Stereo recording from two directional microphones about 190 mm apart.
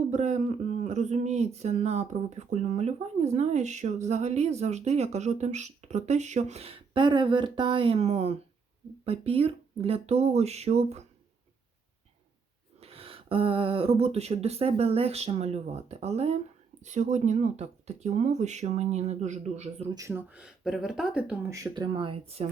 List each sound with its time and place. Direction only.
0.1 s speech: 40° right (ahead or behind)
12.8 s speech: 30° right (ahead or behind)
19.9 s speech: 15° right (ahead or behind)
21.5 s speech: 20° right (ahead or behind)